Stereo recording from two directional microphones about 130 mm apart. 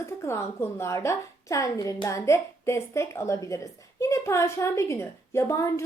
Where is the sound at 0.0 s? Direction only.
20° left (ahead or behind).